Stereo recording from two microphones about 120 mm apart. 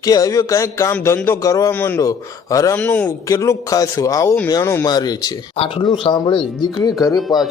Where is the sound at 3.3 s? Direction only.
25° left (ahead or behind).